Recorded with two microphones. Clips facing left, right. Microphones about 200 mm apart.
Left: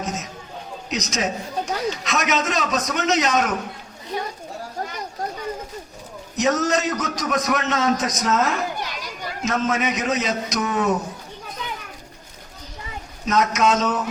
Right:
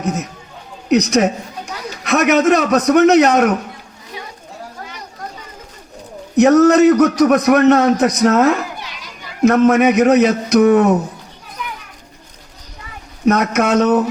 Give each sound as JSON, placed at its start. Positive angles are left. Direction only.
{"t": 0.0, "sound": "a man's voice", "side_deg": -60}
{"t": 6.3, "sound": "a man's voice", "side_deg": -60}
{"t": 8.8, "sound": "children playing", "side_deg": 45}
{"t": 9.4, "sound": "a man's voice", "side_deg": -60}
{"t": 13.2, "sound": "a man's voice", "side_deg": -60}